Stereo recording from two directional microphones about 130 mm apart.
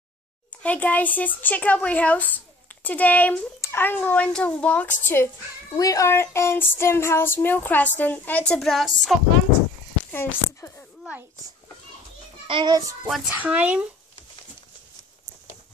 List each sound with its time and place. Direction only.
0.6 s speech: 10° left (ahead or behind)
10.1 s speech: 15° left (ahead or behind)
12.4 s a child's voice: 35° right (ahead or behind)
13.0 s speech: 5° right (ahead or behind)